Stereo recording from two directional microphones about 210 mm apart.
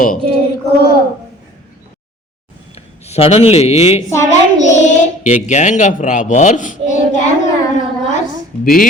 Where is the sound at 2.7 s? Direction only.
30° left (ahead or behind).